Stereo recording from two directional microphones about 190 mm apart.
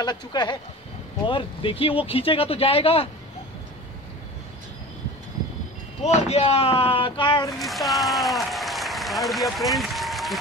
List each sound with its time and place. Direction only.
0.0 s speech: 20° left (ahead or behind)
6.0 s speech: 35° left (ahead or behind)
7.5 s speech: centre (ahead or behind)